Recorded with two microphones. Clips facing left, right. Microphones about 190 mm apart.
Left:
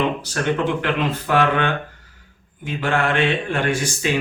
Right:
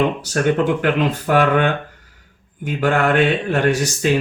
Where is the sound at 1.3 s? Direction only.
45° right (ahead or behind).